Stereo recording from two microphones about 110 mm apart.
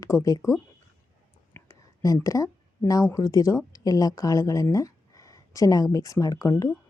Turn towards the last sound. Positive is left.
turn(degrees=30)  # may be behind; listen again after turning